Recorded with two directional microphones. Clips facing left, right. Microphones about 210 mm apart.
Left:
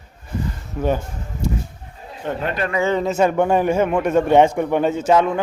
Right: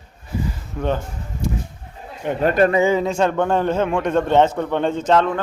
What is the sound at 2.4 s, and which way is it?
Speech, 45° right (ahead or behind).